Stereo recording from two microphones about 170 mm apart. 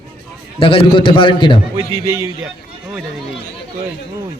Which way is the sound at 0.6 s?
30° left (ahead or behind).